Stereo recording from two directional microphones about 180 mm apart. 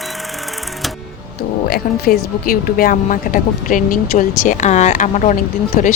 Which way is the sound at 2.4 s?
55° left (ahead or behind).